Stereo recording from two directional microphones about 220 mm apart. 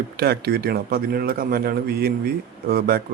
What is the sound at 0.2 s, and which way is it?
A man's voice, 45° right (ahead or behind).